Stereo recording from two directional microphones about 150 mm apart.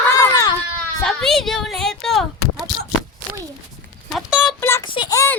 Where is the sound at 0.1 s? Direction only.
20° left (ahead or behind).